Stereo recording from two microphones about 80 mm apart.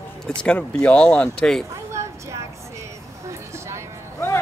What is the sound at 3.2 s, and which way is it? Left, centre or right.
Vehicle, right.